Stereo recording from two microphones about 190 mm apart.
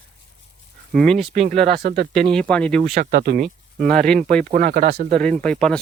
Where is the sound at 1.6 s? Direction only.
55° right (ahead or behind).